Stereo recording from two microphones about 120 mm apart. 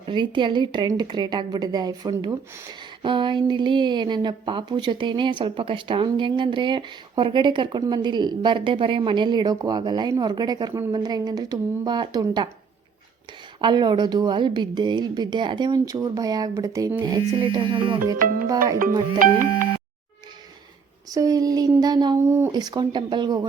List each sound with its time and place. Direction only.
0.0 s a woman's voice: 40° right (ahead or behind)
13.6 s a woman's voice: 40° right (ahead or behind)
17.0 s a woman's voice: 40° right (ahead or behind)
18.1 s a woman's voice: 30° right (ahead or behind)
21.1 s a woman's voice: 30° right (ahead or behind)
22.3 s speech: 20° right (ahead or behind)
22.5 s a woman's voice: 35° right (ahead or behind)